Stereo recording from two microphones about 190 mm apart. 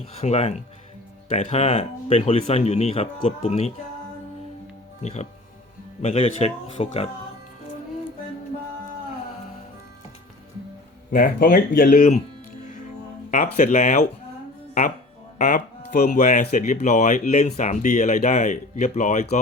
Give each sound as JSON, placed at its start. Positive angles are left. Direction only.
{"t": 0.2, "sound": "speech", "side_deg": 35}
{"t": 5.0, "sound": "speech", "side_deg": 35}
{"t": 11.1, "sound": "speech", "side_deg": 45}
{"t": 13.3, "sound": "speech", "side_deg": 45}
{"t": 15.4, "sound": "speech", "side_deg": 45}